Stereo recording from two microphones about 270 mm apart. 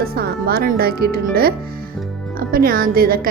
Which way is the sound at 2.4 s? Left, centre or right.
Right.